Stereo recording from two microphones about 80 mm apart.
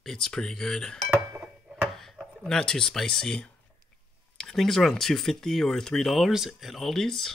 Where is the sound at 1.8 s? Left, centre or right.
Centre.